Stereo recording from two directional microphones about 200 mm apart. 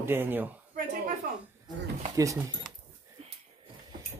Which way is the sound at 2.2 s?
15° right (ahead or behind).